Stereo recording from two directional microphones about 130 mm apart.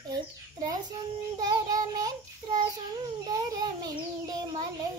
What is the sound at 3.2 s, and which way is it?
Child singing, 30° right (ahead or behind).